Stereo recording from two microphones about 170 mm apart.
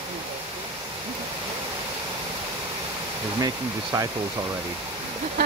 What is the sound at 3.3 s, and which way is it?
Speech, 20° right (ahead or behind).